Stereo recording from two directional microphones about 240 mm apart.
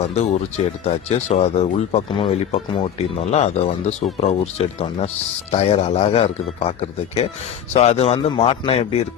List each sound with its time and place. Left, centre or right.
0.0 s speech: left
7.7 s speech: left